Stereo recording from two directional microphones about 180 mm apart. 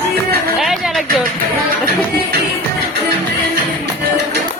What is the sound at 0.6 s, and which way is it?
Music, centre (ahead or behind).